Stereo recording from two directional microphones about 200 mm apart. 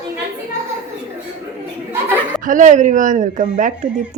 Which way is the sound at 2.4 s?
40° right (ahead or behind).